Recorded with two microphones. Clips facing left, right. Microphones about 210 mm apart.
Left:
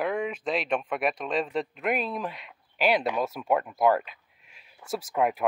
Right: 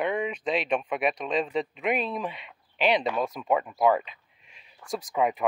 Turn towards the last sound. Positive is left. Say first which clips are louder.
# even
turn(degrees=5)  # may be behind; listen again after turning